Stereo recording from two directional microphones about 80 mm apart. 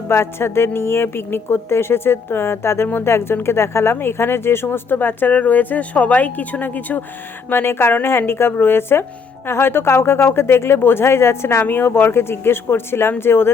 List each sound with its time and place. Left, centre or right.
0.1 s a woman's voice: left